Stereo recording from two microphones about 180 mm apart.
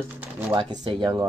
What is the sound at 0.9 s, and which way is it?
Speech, 25° right (ahead or behind).